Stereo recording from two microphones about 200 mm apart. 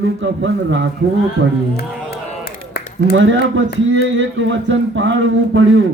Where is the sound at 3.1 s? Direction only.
70° right (ahead or behind).